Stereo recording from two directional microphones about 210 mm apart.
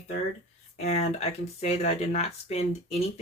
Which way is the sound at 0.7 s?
30° left (ahead or behind).